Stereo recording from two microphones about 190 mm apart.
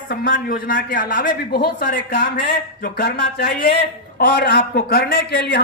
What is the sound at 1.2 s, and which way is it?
A man's voice, 55° left (ahead or behind).